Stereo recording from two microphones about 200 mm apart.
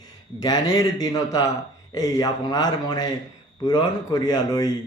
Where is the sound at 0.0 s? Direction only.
20° left (ahead or behind).